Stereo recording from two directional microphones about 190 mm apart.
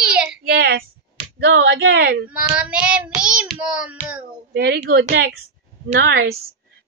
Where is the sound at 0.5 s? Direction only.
55° right (ahead or behind).